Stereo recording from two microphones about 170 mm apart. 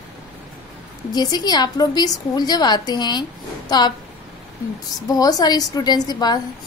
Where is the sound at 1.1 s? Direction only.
25° left (ahead or behind).